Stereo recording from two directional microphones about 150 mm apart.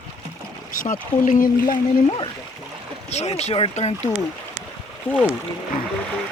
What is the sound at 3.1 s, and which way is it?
Speech, 45° left (ahead or behind).